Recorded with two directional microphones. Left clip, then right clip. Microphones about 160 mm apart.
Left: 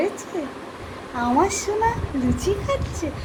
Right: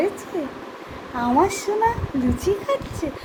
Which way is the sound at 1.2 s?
15° right (ahead or behind).